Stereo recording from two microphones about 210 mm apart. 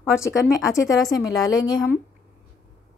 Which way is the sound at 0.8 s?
15° left (ahead or behind).